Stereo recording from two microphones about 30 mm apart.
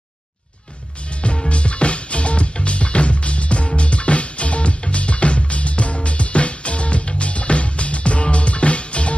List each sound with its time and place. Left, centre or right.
1.5 s music: left